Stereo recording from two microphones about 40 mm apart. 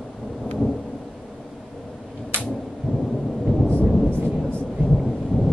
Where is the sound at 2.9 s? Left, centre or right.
Centre.